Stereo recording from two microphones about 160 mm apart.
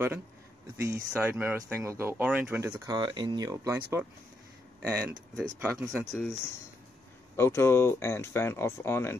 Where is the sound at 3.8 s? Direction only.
10° right (ahead or behind).